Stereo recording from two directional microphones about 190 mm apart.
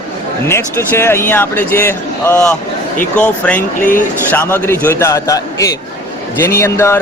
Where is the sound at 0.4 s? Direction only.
15° left (ahead or behind).